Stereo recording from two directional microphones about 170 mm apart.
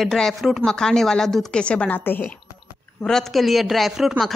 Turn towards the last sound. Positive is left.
turn(degrees=0)  # may be behind; listen again after turning